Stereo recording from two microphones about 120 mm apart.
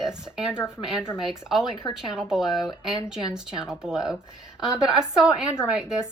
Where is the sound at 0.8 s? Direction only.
5° right (ahead or behind).